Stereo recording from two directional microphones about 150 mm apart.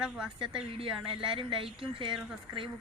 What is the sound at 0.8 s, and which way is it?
Speech, 35° right (ahead or behind).